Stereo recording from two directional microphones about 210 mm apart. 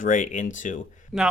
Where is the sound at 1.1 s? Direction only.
Centre (ahead or behind).